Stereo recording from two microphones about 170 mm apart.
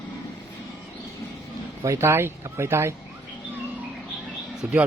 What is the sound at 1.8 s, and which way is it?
Speech, 15° right (ahead or behind).